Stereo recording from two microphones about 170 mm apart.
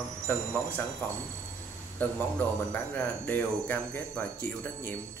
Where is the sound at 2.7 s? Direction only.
10° left (ahead or behind).